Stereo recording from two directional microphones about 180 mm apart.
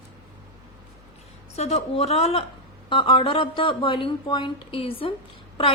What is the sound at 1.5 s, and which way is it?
A woman's voice, 35° left (ahead or behind).